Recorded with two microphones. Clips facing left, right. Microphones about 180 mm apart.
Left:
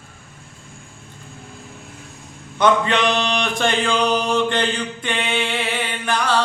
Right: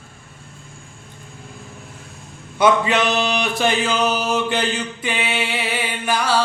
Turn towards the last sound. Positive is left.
turn(degrees=-5)  # may be behind; listen again after turning